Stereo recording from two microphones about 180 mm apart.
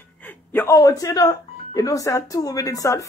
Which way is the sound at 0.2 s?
10° left (ahead or behind).